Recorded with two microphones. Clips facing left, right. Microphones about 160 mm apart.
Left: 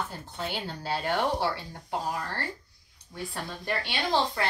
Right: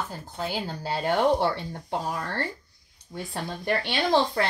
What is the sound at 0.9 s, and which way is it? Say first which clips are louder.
A woman's voice: right 5 dB; 45° right (ahead or behind).